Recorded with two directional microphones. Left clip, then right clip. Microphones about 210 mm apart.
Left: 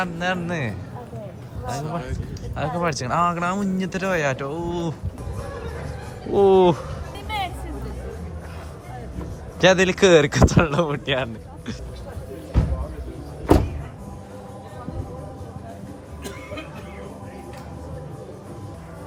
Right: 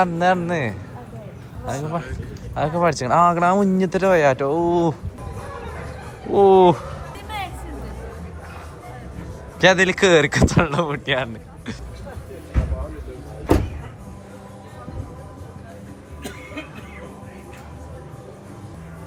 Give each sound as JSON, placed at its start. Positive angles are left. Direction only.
{"t": 0.0, "sound": "speech", "side_deg": 5}
{"t": 6.3, "sound": "speech", "side_deg": 15}
{"t": 9.6, "sound": "speech", "side_deg": 15}